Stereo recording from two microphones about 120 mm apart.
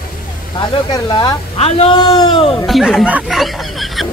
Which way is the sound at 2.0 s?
40° left (ahead or behind).